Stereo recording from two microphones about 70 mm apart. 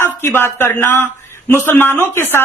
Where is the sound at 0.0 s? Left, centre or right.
Left.